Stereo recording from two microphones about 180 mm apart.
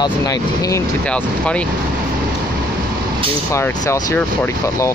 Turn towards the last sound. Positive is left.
turn(degrees=15)  # may be behind; listen again after turning